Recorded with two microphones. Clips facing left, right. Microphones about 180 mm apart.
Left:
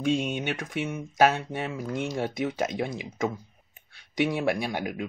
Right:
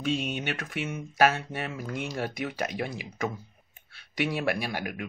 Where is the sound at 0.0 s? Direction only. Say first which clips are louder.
Left 3 dB; 20° left (ahead or behind).